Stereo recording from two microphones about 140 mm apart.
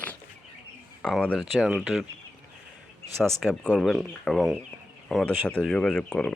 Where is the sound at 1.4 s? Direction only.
5° right (ahead or behind).